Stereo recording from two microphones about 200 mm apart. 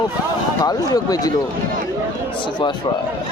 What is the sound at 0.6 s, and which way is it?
Speech, 20° left (ahead or behind).